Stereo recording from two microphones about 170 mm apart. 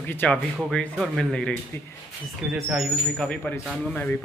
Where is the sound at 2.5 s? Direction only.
Centre (ahead or behind).